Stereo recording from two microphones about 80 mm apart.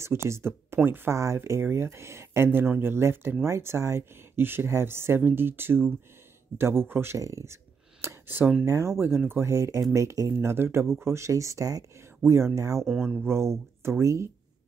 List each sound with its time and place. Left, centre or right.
0.0 s speech: right
7.2 s speech: right
8.0 s a sound: right
8.6 s speech: right
12.2 s speech: right
13.0 s speech: right